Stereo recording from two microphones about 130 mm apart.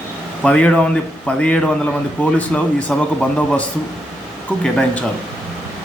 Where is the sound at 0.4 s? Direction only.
10° left (ahead or behind).